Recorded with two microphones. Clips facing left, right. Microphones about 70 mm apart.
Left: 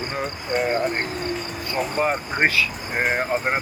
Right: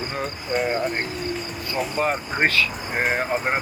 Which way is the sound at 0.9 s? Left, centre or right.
Left.